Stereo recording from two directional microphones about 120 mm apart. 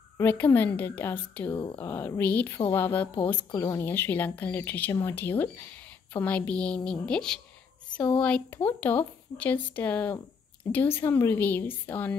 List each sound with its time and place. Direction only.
0.2 s a woman's voice: 15° left (ahead or behind)
1.5 s speech: 40° left (ahead or behind)
1.8 s a woman's voice: 20° left (ahead or behind)